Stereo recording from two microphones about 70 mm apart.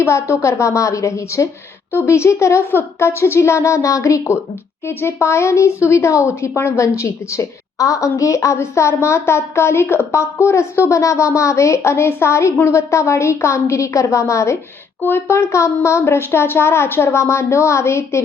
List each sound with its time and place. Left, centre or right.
0.0 s speech: left
4.9 s speech: left